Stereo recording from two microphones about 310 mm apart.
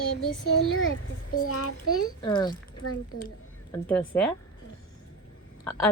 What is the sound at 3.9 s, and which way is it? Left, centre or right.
Speech, centre.